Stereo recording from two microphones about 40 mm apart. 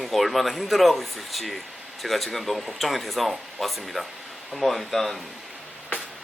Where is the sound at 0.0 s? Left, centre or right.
Centre.